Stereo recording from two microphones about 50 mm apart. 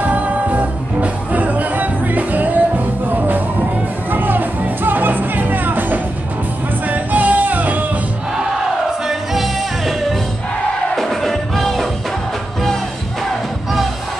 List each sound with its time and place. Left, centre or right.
0.0 s music: right
9.0 s music: centre
11.0 s music: centre